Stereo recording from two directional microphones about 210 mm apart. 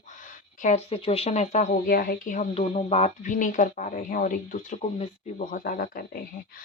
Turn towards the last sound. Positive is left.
turn(degrees=45)  # may be behind; listen again after turning